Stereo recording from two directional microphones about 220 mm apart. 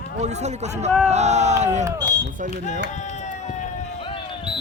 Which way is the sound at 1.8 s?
15° right (ahead or behind).